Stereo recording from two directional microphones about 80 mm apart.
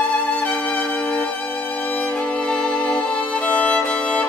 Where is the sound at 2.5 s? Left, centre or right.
Centre.